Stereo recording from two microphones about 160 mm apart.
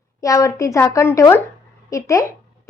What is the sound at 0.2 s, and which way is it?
A woman's voice, 20° left (ahead or behind).